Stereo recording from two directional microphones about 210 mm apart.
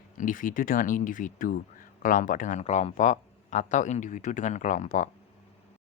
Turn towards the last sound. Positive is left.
turn(degrees=35)  # may be behind; listen again after turning